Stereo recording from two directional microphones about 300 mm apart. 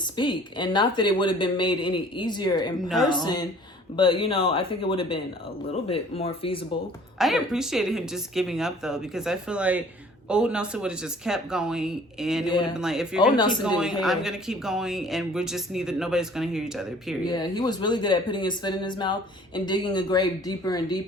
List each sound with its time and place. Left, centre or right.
0.2 s speech: centre
7.2 s speech: centre
13.3 s speech: centre
13.7 s speech: centre
17.2 s speech: centre